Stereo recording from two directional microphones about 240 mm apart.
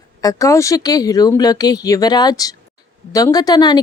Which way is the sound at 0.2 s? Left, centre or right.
Centre.